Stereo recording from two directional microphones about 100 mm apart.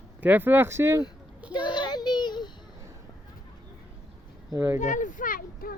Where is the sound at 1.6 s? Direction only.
50° left (ahead or behind).